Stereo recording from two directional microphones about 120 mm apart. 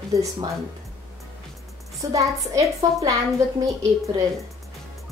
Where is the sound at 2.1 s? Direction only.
25° right (ahead or behind).